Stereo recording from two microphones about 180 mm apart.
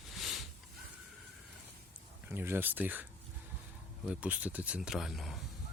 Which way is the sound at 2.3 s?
10° right (ahead or behind).